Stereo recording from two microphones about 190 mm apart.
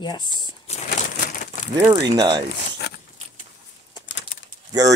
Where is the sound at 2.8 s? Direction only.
60° left (ahead or behind).